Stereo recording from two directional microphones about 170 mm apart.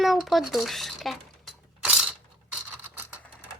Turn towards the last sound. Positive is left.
turn(degrees=-10)  # may be behind; listen again after turning